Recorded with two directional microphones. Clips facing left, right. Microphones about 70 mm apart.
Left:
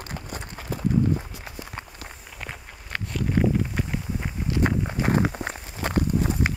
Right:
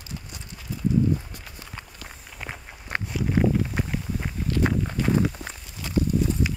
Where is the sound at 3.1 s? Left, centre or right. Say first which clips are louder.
Even; centre.